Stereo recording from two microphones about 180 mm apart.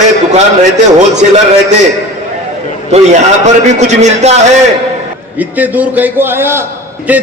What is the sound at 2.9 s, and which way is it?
A man's voice, 40° right (ahead or behind).